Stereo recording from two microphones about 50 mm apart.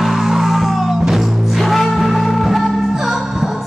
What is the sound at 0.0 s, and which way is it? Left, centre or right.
Music, centre.